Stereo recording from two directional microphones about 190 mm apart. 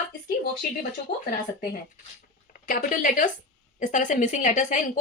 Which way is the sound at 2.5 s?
45° left (ahead or behind).